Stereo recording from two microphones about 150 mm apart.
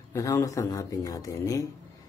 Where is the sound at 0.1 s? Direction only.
20° left (ahead or behind).